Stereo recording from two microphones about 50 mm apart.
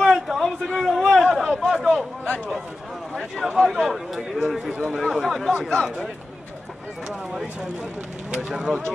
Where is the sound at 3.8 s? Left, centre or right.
Centre.